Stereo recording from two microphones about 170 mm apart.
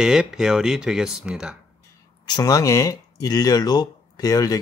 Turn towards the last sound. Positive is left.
turn(degrees=20)  # may be behind; listen again after turning